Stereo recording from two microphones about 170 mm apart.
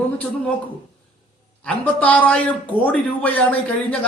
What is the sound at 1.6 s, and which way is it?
A man's voice, 5° left (ahead or behind).